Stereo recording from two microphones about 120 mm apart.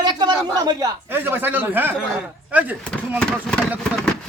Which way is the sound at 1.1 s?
15° right (ahead or behind).